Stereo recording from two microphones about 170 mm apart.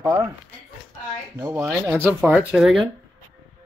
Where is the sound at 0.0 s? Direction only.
20° right (ahead or behind).